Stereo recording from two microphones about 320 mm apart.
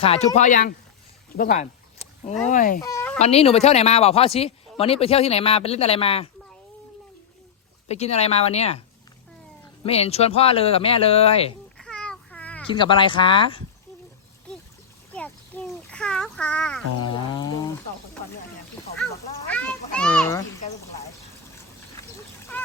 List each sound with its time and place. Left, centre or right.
0.0 s speech: centre
1.4 s a sound: left
2.5 s speech: left
2.8 s fowl: centre
3.2 s speech: centre
7.9 s speech: centre
9.8 s speech: centre
11.8 s babbling: centre
12.7 s speech: centre
15.1 s a sound: centre
17.0 s speech: centre
19.5 s children playing: centre
22.5 s goose: centre